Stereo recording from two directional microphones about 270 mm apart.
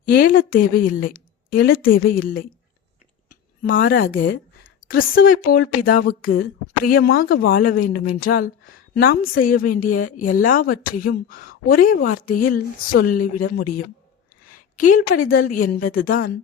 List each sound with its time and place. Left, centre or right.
0.0 s a woman's voice: left